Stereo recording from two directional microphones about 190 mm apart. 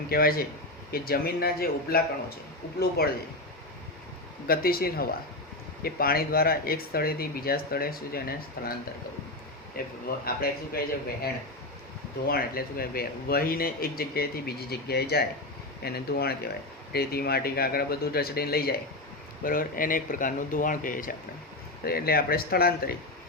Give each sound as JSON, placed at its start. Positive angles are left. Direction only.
{"t": 0.1, "sound": "speech", "side_deg": 50}
{"t": 3.0, "sound": "speech", "side_deg": 55}
{"t": 4.4, "sound": "speech", "side_deg": 50}
{"t": 9.7, "sound": "speech", "side_deg": 50}
{"t": 12.3, "sound": "speech", "side_deg": 50}